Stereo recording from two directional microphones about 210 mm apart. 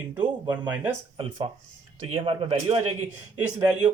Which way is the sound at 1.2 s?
25° right (ahead or behind).